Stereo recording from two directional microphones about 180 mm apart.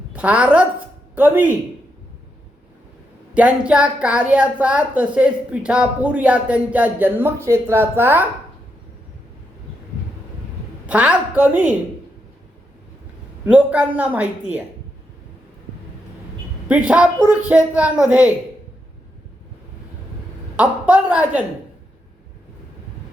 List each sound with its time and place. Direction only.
0.1 s a woman's voice: 10° right (ahead or behind)
3.3 s a woman's voice: 5° right (ahead or behind)
10.8 s a woman's voice: 5° right (ahead or behind)
13.4 s a woman's voice: 10° right (ahead or behind)
16.6 s a woman's voice: 5° right (ahead or behind)
20.6 s a woman's voice: 10° right (ahead or behind)